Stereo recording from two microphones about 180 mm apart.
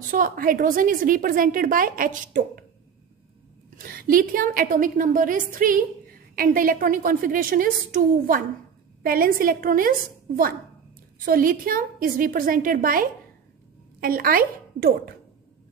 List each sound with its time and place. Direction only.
0.1 s a woman's voice: 50° right (ahead or behind)
3.7 s a woman's voice: 55° right (ahead or behind)